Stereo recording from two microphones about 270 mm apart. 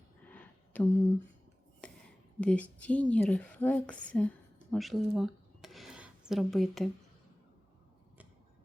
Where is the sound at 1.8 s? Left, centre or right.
Centre.